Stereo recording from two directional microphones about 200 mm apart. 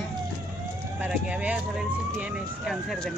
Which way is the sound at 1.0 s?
5° right (ahead or behind).